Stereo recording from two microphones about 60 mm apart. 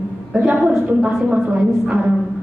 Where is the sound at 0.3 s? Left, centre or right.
Right.